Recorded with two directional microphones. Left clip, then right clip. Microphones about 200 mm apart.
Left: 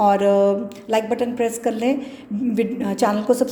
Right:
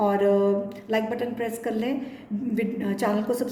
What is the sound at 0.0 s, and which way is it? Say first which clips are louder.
A woman's voice: left 6 dB; 30° left (ahead or behind).